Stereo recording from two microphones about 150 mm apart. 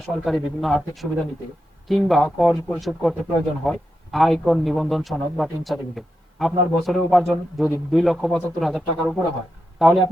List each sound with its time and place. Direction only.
0.0 s a man's voice: centre (ahead or behind)